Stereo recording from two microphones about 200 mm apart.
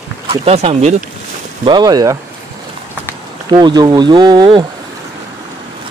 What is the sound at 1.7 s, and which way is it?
Speech, 20° right (ahead or behind).